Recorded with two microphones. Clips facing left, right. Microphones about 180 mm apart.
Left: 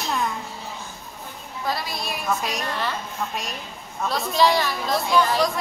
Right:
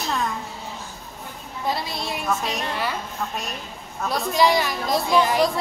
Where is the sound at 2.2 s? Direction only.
10° right (ahead or behind).